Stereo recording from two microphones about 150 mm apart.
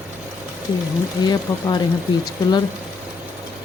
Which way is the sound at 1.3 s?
30° left (ahead or behind).